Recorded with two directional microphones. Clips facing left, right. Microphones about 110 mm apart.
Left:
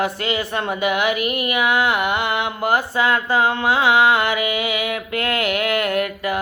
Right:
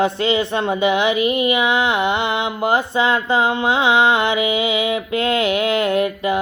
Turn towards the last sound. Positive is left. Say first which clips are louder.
# right 3 dB
turn(degrees=-20)  # may be behind; listen again after turning